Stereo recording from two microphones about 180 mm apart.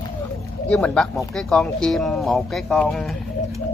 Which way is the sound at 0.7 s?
5° left (ahead or behind).